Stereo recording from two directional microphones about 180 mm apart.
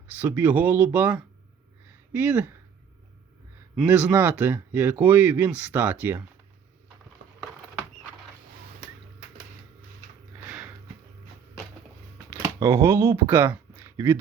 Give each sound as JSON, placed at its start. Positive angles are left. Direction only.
{"t": 0.2, "sound": "speech", "side_deg": -10}
{"t": 3.8, "sound": "speech", "side_deg": -5}
{"t": 12.3, "sound": "speech", "side_deg": -15}